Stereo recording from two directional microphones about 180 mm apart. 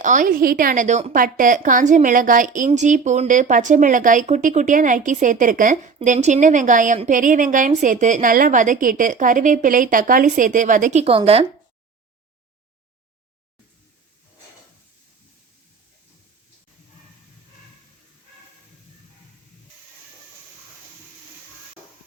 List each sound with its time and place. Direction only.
0.0 s a woman's voice: 45° right (ahead or behind)
11.0 s speech: 30° right (ahead or behind)
21.8 s a sound: 10° right (ahead or behind)